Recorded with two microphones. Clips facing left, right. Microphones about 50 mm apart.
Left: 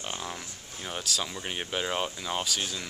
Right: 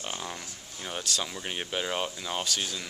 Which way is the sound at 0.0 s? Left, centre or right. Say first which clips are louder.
Even; centre.